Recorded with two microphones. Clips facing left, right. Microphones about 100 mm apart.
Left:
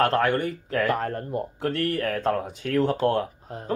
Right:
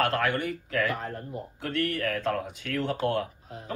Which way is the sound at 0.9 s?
60° left (ahead or behind).